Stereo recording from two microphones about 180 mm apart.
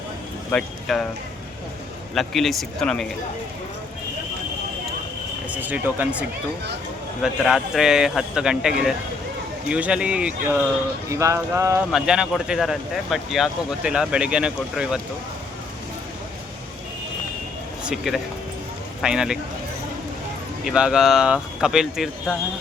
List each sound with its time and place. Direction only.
0.5 s speech: centre (ahead or behind)
2.1 s speech: centre (ahead or behind)
5.5 s speech: 10° right (ahead or behind)
11.9 s speech: 5° right (ahead or behind)
17.8 s speech: centre (ahead or behind)
20.7 s speech: 5° right (ahead or behind)